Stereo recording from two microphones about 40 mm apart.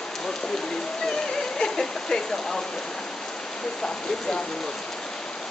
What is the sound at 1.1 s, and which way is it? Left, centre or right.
Rain on surface, centre.